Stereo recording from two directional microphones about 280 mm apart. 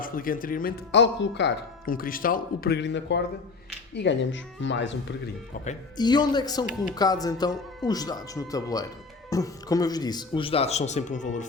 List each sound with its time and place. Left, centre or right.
0.0 s speech: left
5.6 s speech: centre